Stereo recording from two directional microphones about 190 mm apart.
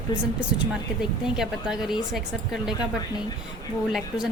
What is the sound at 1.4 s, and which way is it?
Speech, centre (ahead or behind).